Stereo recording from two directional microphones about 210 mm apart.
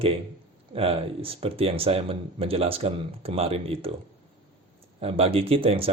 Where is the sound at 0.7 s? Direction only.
25° right (ahead or behind).